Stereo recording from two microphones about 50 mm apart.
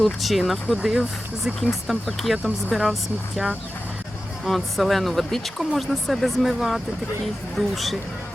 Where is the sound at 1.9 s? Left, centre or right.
Centre.